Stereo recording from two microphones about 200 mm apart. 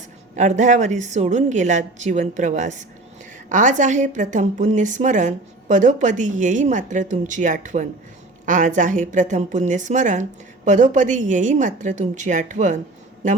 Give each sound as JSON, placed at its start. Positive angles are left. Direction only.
{"t": 0.3, "sound": "a woman's voice", "side_deg": -35}